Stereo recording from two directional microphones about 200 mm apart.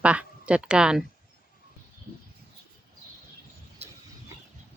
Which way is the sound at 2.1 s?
45° right (ahead or behind).